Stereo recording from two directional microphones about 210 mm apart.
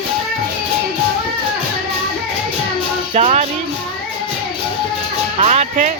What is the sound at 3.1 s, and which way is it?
Speech, 30° right (ahead or behind).